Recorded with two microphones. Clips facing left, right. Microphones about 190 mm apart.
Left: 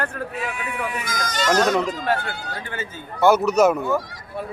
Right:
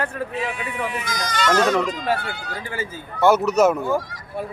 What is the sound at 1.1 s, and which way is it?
Speech, 40° left (ahead or behind).